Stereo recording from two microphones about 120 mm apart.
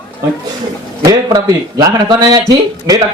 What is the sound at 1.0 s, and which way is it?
Speech, 35° right (ahead or behind).